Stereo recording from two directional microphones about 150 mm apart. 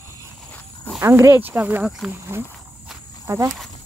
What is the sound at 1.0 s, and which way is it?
Speech, 20° right (ahead or behind).